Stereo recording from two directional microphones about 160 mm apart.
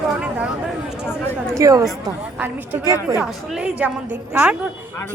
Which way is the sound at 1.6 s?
20° right (ahead or behind).